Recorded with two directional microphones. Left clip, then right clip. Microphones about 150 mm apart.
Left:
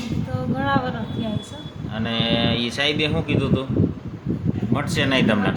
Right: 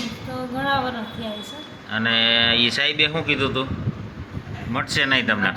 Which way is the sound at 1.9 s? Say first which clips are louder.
Right 5 dB; 15° left (ahead or behind).